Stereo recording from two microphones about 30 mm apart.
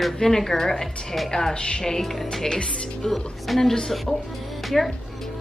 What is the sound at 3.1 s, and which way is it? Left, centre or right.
Speech, centre.